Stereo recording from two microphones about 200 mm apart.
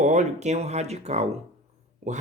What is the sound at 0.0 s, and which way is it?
Speech, 35° right (ahead or behind).